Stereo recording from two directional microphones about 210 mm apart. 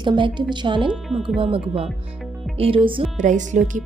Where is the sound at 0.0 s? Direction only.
20° right (ahead or behind).